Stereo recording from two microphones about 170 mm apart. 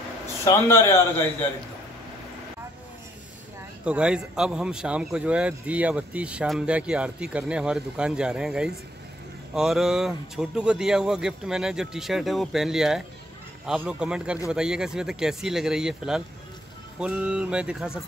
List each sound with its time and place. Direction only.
0.5 s a man's voice: 15° left (ahead or behind)
3.8 s speech: 5° right (ahead or behind)